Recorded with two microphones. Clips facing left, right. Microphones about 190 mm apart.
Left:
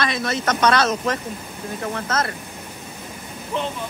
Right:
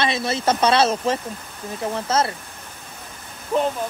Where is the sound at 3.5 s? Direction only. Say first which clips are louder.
Right 5 dB; 40° right (ahead or behind).